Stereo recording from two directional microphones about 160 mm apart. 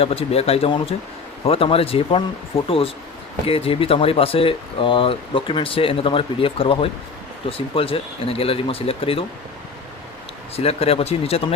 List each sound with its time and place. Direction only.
0.0 s speech: 35° left (ahead or behind)
10.5 s speech: 40° left (ahead or behind)